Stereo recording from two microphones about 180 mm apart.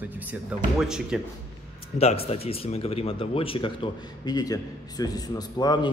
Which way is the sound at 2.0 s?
35° left (ahead or behind).